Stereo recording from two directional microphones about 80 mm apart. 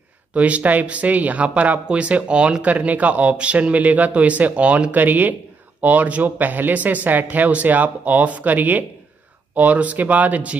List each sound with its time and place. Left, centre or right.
0.3 s speech: centre